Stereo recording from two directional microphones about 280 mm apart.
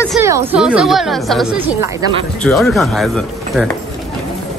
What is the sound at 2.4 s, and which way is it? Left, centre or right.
Speech, centre.